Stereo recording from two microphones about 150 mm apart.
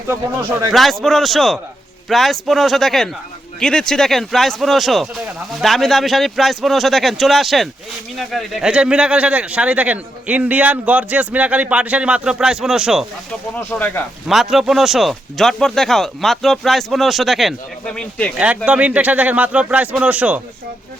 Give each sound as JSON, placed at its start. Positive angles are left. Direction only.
{"t": 0.7, "sound": "a man's voice", "side_deg": 0}
{"t": 13.6, "sound": "speech", "side_deg": 10}
{"t": 14.3, "sound": "speech", "side_deg": 0}
{"t": 18.3, "sound": "a man's voice", "side_deg": -10}